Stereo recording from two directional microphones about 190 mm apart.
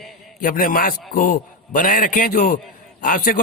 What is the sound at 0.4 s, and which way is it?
A man's voice, 45° left (ahead or behind).